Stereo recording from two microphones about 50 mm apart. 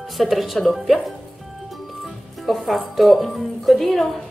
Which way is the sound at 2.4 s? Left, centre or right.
Centre.